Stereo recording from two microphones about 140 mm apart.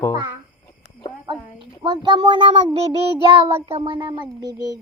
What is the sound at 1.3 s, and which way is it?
A child's voice, 35° right (ahead or behind).